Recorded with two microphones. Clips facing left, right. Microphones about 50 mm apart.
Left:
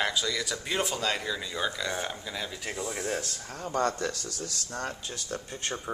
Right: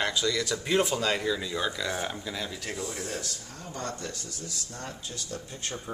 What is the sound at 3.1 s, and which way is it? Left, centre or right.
Speech, left.